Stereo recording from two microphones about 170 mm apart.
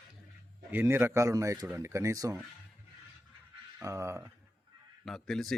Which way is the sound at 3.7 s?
15° right (ahead or behind).